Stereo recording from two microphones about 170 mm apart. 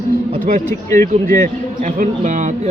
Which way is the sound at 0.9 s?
20° left (ahead or behind).